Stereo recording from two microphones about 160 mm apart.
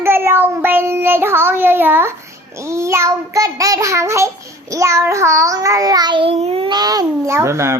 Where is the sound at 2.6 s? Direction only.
15° right (ahead or behind).